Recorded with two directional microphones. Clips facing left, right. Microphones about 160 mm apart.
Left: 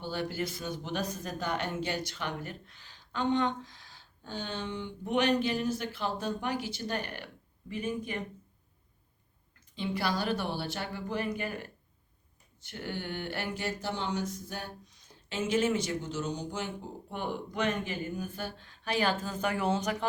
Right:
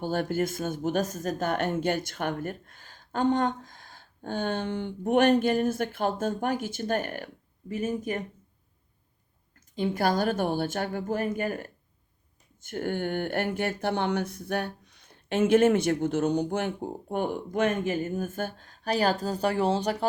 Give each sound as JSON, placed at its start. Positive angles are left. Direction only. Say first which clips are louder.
{"t": 0.0, "sound": "speech", "louder": "right 7 dB", "side_deg": -50}
{"t": 9.7, "sound": "speech", "louder": "right 6 dB", "side_deg": -45}